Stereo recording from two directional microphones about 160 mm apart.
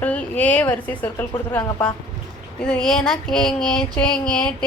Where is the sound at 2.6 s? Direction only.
5° left (ahead or behind).